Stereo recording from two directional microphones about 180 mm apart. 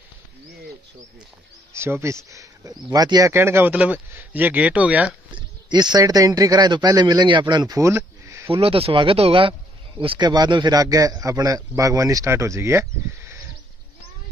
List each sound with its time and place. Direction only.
1.7 s speech: 15° right (ahead or behind)
5.3 s speech: 25° right (ahead or behind)
8.5 s speech: 30° right (ahead or behind); by 13.4 s 15° right (ahead or behind)